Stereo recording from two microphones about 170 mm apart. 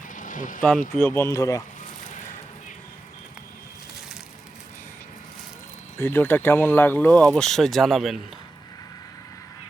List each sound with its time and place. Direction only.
0.1 s a sound: 50° left (ahead or behind)
0.6 s speech: 5° left (ahead or behind)
6.0 s speech: 15° left (ahead or behind)